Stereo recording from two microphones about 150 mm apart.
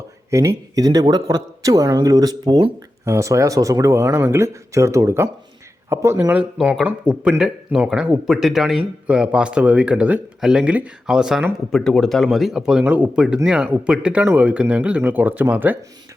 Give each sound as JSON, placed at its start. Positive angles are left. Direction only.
{"t": 0.3, "sound": "speech", "side_deg": -20}